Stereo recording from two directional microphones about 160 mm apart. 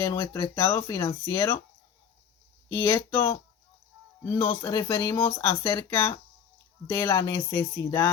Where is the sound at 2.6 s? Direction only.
15° left (ahead or behind).